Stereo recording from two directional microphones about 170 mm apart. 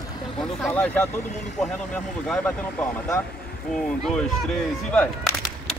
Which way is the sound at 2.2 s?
5° left (ahead or behind).